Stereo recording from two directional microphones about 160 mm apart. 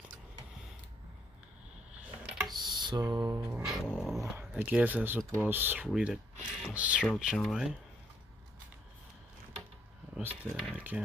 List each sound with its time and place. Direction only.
2.2 s tick: centre (ahead or behind)
2.5 s music: 25° right (ahead or behind)
3.6 s a sound: 5° left (ahead or behind)
4.2 s speech: 15° right (ahead or behind)
10.1 s speech: centre (ahead or behind)